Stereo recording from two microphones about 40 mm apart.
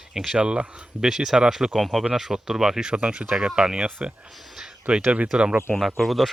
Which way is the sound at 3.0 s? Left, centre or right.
Right.